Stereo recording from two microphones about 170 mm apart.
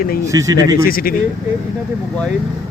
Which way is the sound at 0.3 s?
20° right (ahead or behind).